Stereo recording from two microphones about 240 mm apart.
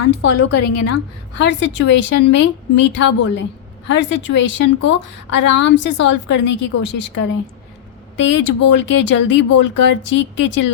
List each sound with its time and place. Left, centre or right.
0.0 s a woman's voice: left
1.4 s a woman's voice: left
8.1 s a woman's voice: left